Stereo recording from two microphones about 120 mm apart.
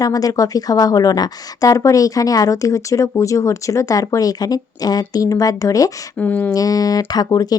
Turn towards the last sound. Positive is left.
turn(degrees=30)  # may be behind; listen again after turning